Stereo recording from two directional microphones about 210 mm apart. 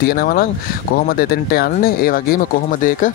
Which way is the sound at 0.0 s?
50° left (ahead or behind).